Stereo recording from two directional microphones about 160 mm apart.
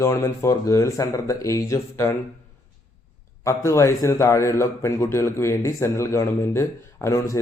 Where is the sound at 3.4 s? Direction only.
20° left (ahead or behind).